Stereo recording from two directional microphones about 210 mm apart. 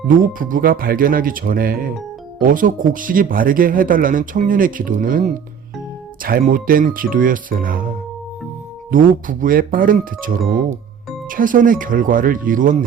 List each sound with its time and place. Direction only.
0.1 s speech: 40° right (ahead or behind)